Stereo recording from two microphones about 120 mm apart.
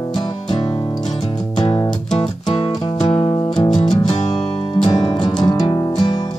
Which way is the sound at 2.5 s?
50° left (ahead or behind).